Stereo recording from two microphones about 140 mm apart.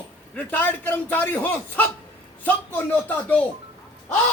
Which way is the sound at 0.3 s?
15° left (ahead or behind).